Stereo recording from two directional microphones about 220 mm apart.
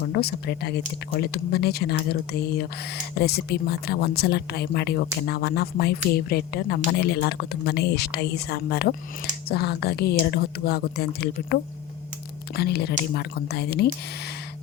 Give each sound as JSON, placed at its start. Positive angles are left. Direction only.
{"t": 0.1, "sound": "speech", "side_deg": 45}
{"t": 12.5, "sound": "speech", "side_deg": 45}